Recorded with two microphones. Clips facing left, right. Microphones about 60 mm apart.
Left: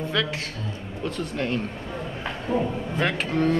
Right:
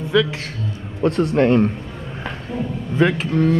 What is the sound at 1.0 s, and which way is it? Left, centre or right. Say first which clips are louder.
Speech: right 12 dB; right.